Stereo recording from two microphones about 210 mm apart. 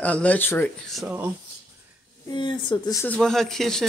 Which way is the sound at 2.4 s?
20° left (ahead or behind).